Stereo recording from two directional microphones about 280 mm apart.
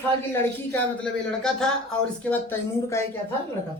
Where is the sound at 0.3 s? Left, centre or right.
Centre.